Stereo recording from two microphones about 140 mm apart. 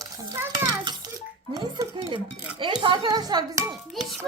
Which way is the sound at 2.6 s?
35° right (ahead or behind).